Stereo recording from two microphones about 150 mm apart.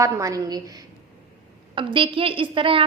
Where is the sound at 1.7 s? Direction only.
35° right (ahead or behind).